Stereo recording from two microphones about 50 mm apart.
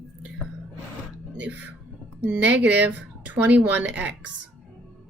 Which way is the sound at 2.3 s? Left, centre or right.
Right.